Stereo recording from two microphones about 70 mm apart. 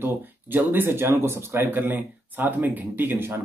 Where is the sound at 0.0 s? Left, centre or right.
Right.